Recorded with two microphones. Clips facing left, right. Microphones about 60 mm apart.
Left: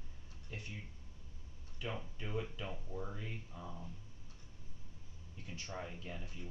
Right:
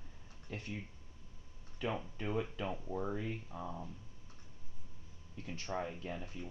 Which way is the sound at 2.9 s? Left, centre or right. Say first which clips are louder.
Right 6 dB; right.